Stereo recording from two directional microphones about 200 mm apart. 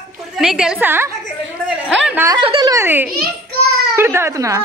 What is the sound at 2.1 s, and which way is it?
Speech, 10° right (ahead or behind).